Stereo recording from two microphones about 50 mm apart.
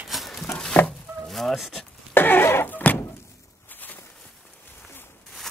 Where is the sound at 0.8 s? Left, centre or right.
Left.